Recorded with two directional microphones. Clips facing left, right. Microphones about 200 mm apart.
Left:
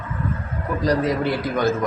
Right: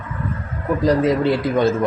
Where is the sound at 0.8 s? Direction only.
25° right (ahead or behind).